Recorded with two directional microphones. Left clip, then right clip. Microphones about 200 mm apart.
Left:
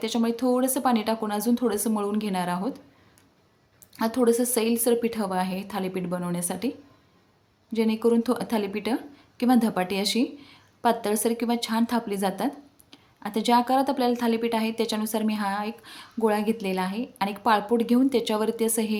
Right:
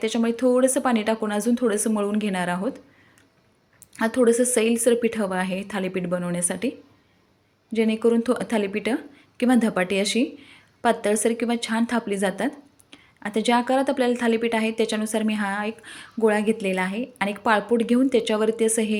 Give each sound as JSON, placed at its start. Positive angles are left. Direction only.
{"t": 0.1, "sound": "a woman's voice", "side_deg": -5}
{"t": 3.9, "sound": "a woman's voice", "side_deg": -5}
{"t": 7.8, "sound": "a woman's voice", "side_deg": -5}